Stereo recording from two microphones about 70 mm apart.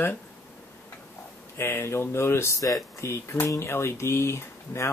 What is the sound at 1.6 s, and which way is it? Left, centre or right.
Speech, left.